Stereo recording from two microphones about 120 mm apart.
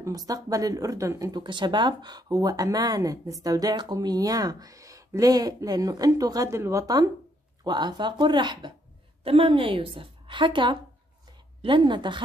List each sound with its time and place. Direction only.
0.0 s speech: 30° right (ahead or behind)
1.3 s speech: 40° right (ahead or behind)
9.2 s a woman's voice: 50° right (ahead or behind)